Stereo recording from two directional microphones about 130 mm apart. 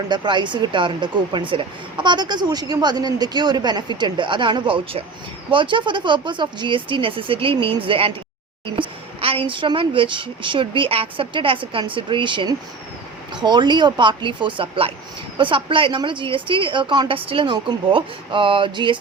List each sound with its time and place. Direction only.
0.1 s speech: 35° right (ahead or behind)
8.6 s a sound: 40° right (ahead or behind)
9.5 s speech: 40° right (ahead or behind)